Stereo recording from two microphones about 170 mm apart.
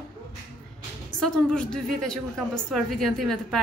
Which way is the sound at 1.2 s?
5° left (ahead or behind).